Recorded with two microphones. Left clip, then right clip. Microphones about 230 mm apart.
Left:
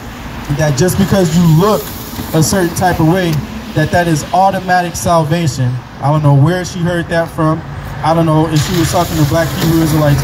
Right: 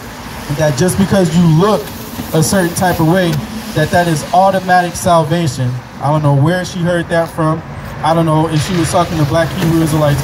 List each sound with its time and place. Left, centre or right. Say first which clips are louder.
0.6 s speech: even; centre
8.5 s speech: left 2 dB; left
8.9 s speech: right 2 dB; centre